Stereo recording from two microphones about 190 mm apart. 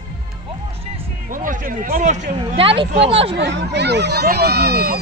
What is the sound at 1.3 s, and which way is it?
Speech, 45° right (ahead or behind).